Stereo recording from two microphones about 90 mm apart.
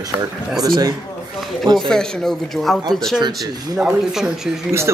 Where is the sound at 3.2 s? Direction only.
45° right (ahead or behind).